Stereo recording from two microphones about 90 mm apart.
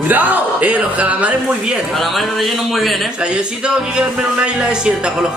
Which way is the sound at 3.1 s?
10° right (ahead or behind).